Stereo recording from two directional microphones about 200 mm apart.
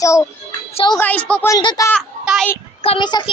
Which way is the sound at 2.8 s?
25° left (ahead or behind).